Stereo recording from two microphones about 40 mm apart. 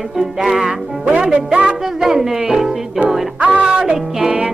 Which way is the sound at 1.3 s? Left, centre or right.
Right.